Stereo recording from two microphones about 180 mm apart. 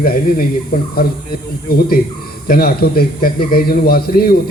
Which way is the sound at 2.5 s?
55° left (ahead or behind).